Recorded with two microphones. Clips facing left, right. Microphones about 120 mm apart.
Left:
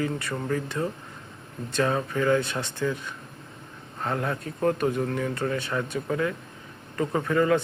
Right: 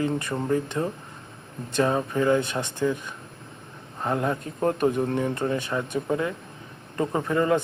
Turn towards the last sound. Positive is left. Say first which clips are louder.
# even
turn(degrees=-20)  # may be behind; listen again after turning